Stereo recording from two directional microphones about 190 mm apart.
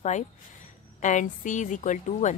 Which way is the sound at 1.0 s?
40° left (ahead or behind).